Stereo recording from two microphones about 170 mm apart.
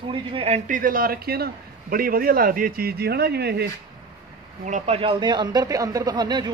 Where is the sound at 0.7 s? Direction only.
55° right (ahead or behind); by 3.6 s 75° right (ahead or behind).